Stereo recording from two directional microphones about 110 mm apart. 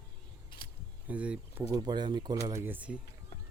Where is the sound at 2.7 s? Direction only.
10° right (ahead or behind).